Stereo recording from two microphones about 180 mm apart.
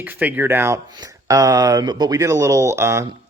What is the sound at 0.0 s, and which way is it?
Speech, 10° right (ahead or behind).